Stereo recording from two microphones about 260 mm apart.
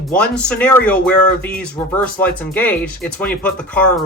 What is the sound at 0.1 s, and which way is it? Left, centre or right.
Speech, centre.